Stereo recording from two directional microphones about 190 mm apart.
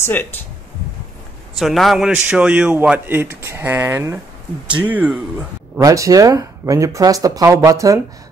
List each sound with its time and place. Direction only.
0.0 s speech: 10° left (ahead or behind)
1.6 s a man's voice: centre (ahead or behind); by 8.0 s 15° right (ahead or behind)